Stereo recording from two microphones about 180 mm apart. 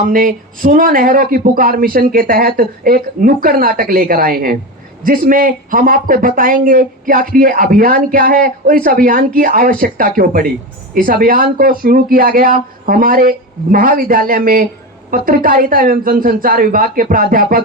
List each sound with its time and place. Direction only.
0.0 s speech: 50° right (ahead or behind)